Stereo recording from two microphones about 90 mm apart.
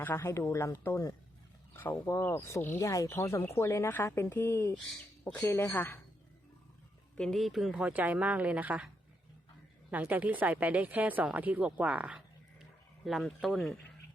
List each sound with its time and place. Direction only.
0.0 s speech: 25° left (ahead or behind)
1.7 s a sound: 25° left (ahead or behind)
2.0 s speech: 30° left (ahead or behind)
7.2 s speech: 5° left (ahead or behind); by 8.9 s 15° right (ahead or behind)
9.9 s speech: 20° right (ahead or behind)
13.2 s speech: centre (ahead or behind)